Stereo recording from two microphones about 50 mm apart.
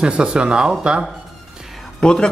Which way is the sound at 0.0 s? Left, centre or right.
Centre.